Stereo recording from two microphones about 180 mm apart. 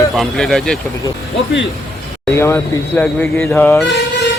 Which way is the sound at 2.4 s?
15° left (ahead or behind).